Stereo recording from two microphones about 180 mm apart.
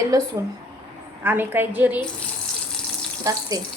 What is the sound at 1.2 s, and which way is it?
Speech, 10° right (ahead or behind).